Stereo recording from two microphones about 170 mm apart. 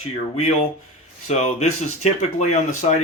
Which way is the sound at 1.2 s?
40° left (ahead or behind).